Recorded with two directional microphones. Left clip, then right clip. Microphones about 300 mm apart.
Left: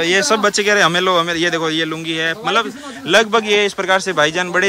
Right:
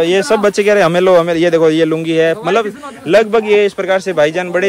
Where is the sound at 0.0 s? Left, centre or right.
Centre.